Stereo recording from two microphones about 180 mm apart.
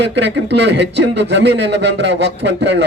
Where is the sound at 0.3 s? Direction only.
70° right (ahead or behind).